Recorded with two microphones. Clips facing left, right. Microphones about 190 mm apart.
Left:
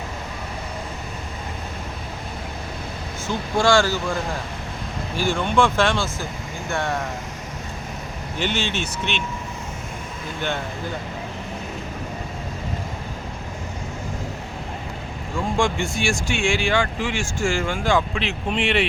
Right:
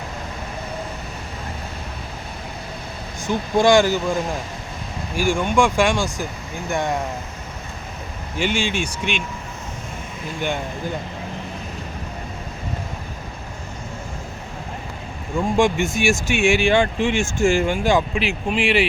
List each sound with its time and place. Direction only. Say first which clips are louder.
3.2 s speech: right 4 dB; 15° right (ahead or behind)
8.4 s speech: right 3 dB; 10° right (ahead or behind)
15.5 s speech: right 4 dB; 20° right (ahead or behind)